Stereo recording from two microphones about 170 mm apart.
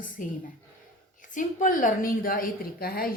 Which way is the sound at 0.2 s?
55° left (ahead or behind).